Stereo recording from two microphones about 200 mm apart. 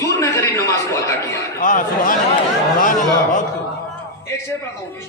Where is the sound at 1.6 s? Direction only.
40° left (ahead or behind).